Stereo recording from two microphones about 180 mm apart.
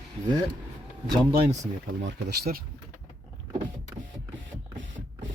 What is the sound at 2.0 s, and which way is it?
Speech, 75° right (ahead or behind).